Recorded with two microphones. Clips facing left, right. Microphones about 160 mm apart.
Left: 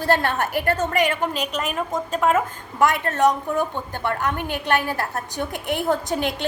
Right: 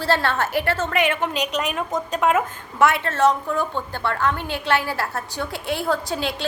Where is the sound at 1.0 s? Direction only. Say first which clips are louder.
Even; 45° left (ahead or behind).